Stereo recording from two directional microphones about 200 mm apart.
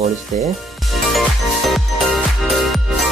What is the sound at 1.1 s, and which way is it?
Music, centre (ahead or behind).